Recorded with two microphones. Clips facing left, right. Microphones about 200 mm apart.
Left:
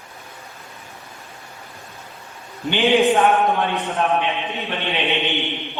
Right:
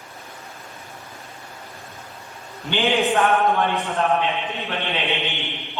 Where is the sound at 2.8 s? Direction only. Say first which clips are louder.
Left 4 dB; 15° left (ahead or behind).